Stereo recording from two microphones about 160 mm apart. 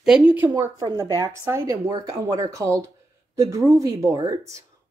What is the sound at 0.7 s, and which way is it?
Speech, 25° right (ahead or behind).